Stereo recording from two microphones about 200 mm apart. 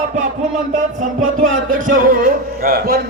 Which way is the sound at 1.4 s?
40° right (ahead or behind).